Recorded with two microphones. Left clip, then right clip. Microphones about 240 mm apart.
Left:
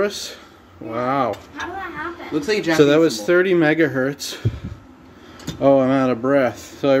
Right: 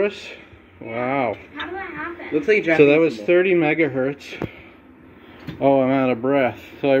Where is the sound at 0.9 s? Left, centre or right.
Centre.